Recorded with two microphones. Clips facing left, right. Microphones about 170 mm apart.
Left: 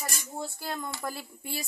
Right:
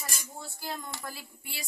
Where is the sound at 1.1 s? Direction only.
45° left (ahead or behind).